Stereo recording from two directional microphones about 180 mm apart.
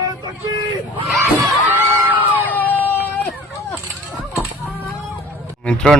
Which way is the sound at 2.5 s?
10° left (ahead or behind).